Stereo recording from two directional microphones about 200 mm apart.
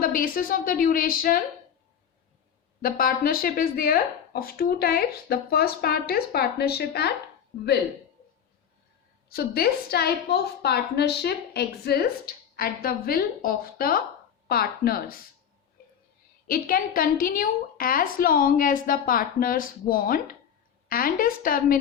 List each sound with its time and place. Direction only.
0.0 s a woman's voice: 45° left (ahead or behind)
2.8 s a woman's voice: 45° left (ahead or behind)
9.3 s a woman's voice: 50° left (ahead or behind)
16.5 s a woman's voice: 45° left (ahead or behind)